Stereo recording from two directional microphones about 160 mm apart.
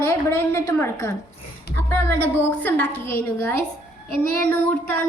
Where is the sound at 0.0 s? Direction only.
20° left (ahead or behind).